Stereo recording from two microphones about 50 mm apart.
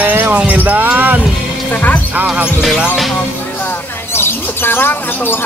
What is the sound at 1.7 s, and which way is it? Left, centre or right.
Music, left.